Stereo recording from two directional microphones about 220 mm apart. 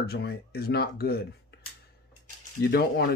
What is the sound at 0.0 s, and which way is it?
Speech, 45° left (ahead or behind).